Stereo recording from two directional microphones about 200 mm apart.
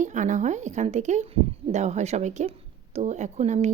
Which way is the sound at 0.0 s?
40° right (ahead or behind).